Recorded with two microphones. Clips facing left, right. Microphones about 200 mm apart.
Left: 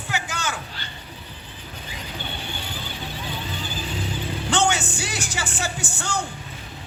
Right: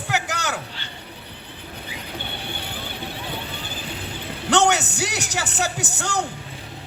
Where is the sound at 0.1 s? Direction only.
70° right (ahead or behind).